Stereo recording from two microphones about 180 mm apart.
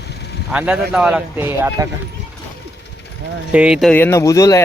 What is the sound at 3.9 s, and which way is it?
Speech, 15° left (ahead or behind).